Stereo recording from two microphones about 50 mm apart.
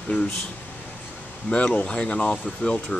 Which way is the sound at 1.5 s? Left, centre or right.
Left.